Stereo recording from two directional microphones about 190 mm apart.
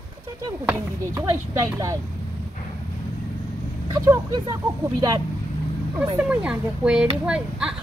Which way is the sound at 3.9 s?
20° right (ahead or behind).